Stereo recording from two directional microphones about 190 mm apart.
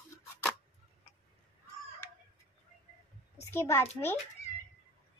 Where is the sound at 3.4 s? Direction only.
15° left (ahead or behind).